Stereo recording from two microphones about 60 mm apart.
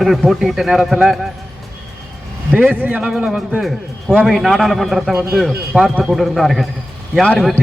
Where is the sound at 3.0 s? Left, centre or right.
Centre.